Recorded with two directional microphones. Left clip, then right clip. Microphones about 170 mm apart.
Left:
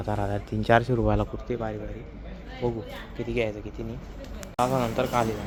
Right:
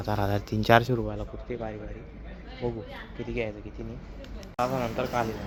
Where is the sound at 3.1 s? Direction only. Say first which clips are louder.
Left 5 dB; 25° left (ahead or behind).